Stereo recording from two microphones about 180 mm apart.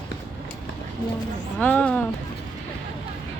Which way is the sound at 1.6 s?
5° left (ahead or behind).